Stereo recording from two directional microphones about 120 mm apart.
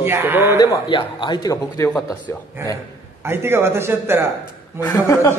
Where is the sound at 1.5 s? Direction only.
25° left (ahead or behind).